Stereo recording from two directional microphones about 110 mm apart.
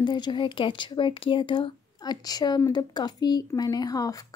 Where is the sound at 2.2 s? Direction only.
35° left (ahead or behind).